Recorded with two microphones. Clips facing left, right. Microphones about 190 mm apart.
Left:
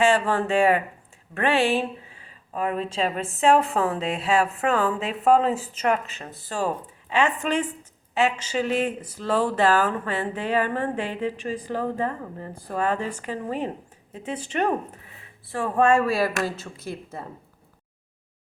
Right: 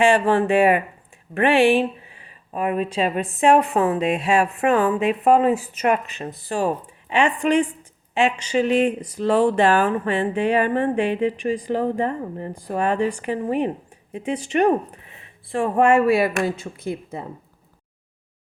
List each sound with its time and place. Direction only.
0.0 s speech: 15° right (ahead or behind)
16.7 s speech: 55° right (ahead or behind)